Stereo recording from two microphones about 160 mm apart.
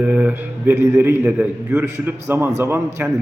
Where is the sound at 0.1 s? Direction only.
10° right (ahead or behind).